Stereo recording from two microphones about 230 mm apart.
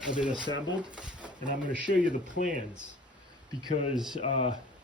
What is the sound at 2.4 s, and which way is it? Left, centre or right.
Speech, left.